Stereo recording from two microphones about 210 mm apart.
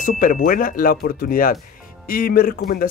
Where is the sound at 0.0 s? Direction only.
40° left (ahead or behind).